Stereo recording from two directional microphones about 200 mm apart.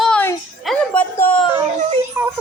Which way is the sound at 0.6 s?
Centre (ahead or behind).